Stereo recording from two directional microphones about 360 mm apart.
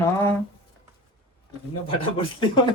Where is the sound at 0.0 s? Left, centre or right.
Centre.